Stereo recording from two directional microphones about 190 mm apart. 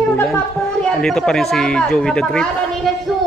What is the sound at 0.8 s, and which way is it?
Speech, centre (ahead or behind).